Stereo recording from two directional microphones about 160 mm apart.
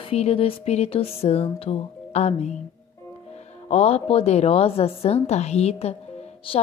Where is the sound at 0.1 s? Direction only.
40° left (ahead or behind).